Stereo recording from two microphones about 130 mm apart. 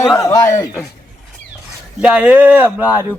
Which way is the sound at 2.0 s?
10° right (ahead or behind).